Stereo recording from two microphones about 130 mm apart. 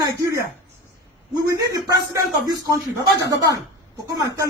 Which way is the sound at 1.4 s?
25° right (ahead or behind).